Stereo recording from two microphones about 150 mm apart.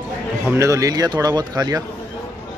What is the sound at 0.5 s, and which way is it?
Speech, 20° right (ahead or behind).